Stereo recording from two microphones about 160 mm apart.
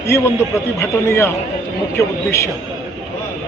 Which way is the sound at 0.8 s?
15° left (ahead or behind).